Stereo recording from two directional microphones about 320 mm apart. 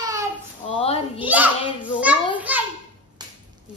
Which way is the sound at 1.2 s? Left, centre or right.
Centre.